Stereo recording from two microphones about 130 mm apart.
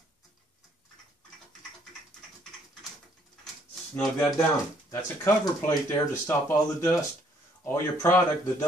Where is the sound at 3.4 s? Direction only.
Centre (ahead or behind).